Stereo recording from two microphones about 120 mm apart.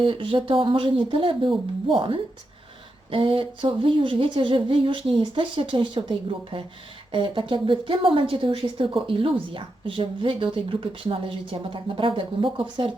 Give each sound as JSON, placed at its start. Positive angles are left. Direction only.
{"t": 0.0, "sound": "a woman's voice", "side_deg": -45}